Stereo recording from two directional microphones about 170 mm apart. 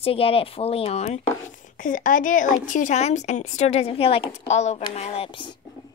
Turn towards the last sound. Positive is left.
turn(degrees=30)  # may be behind; listen again after turning